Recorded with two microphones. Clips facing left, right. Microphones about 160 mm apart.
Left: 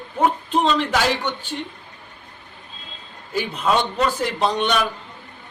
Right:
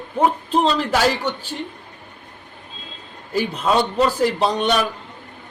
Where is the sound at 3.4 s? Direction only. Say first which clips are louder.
Right 2 dB; 35° right (ahead or behind).